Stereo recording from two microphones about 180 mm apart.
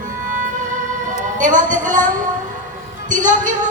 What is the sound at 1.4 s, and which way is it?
Speech, 45° right (ahead or behind).